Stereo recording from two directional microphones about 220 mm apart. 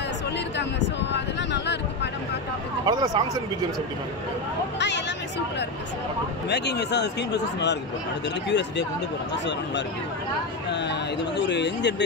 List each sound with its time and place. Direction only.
0.6 s a sound: 50° left (ahead or behind)
2.8 s speech: 20° right (ahead or behind)
4.7 s speech: 50° left (ahead or behind)
6.5 s speech: 50° left (ahead or behind)
10.7 s speech: 50° left (ahead or behind)